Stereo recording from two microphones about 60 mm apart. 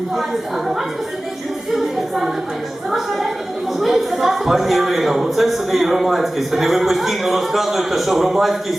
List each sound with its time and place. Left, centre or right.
1.7 s music: centre
2.9 s a man's voice: centre